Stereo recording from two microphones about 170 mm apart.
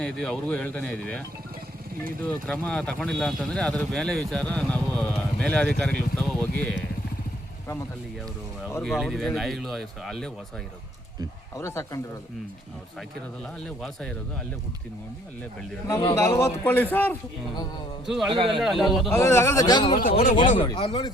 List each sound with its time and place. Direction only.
0.0 s speech: 5° left (ahead or behind)
2.5 s speech: 5° left (ahead or behind)
8.8 s speech: centre (ahead or behind)
11.5 s speech: 15° left (ahead or behind)
13.6 s speech: 5° left (ahead or behind)
16.1 s speech: 15° left (ahead or behind)
18.0 s speech: centre (ahead or behind)
18.3 s a man's voice: 30° right (ahead or behind)
18.6 s speech: centre (ahead or behind)
19.1 s speech: 15° left (ahead or behind)
19.9 s speech: 55° left (ahead or behind)
20.6 s speech: 30° left (ahead or behind)